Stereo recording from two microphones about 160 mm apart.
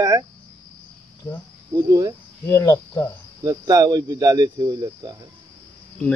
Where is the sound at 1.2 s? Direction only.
25° left (ahead or behind).